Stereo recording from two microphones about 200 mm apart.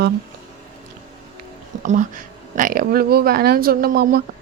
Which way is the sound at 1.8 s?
40° right (ahead or behind).